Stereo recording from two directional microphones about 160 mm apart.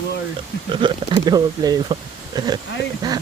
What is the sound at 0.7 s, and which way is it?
Speech, 30° right (ahead or behind).